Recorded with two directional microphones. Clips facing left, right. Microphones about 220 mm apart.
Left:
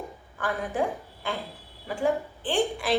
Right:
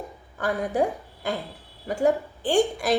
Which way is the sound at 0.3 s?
40° right (ahead or behind).